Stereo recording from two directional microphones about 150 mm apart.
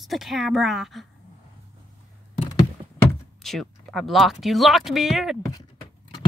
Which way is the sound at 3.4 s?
Centre (ahead or behind).